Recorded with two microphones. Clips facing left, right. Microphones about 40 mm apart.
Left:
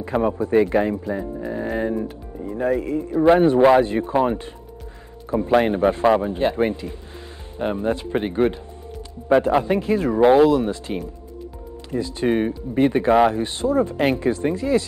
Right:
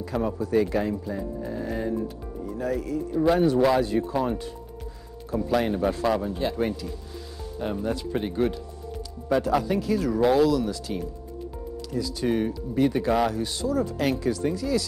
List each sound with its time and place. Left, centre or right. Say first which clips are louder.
0.0 s speech: left 6 dB; left